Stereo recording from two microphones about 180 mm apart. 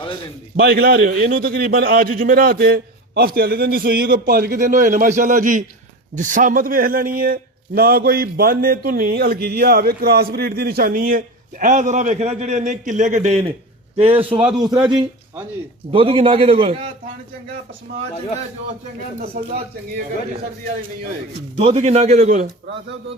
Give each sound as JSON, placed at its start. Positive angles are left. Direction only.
{"t": 0.5, "sound": "a man's voice", "side_deg": -55}
{"t": 11.6, "sound": "a man's voice", "side_deg": -45}
{"t": 14.6, "sound": "a man's voice", "side_deg": -20}
{"t": 21.6, "sound": "a man's voice", "side_deg": -35}
{"t": 22.1, "sound": "a man's voice", "side_deg": -50}